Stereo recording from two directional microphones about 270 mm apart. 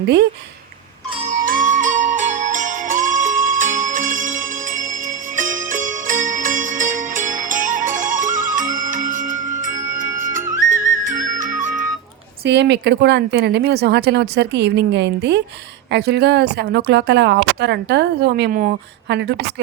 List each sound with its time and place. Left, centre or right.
1.3 s music: right
5.4 s music: right
12.5 s a woman's voice: right